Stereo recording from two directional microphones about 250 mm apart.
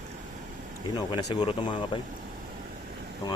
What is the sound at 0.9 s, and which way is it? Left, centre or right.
Speech, centre.